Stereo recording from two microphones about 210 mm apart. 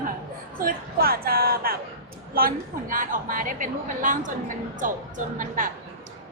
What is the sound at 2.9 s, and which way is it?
A woman's voice, 40° right (ahead or behind).